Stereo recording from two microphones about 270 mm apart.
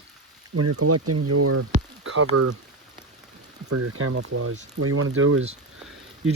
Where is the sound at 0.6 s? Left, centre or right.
Right.